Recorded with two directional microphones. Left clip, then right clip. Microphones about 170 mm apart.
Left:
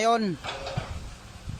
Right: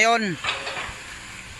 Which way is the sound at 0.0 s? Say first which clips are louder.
Right 4 dB; 10° left (ahead or behind).